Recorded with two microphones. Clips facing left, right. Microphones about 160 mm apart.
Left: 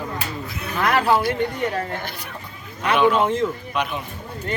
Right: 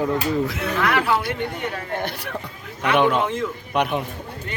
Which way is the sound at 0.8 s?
40° left (ahead or behind).